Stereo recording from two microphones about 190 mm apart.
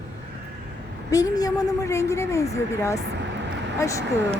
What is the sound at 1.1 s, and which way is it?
A woman's voice, 20° left (ahead or behind).